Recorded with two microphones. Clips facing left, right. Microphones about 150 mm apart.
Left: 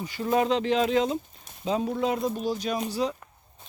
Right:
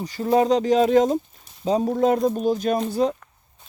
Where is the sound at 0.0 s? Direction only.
40° right (ahead or behind).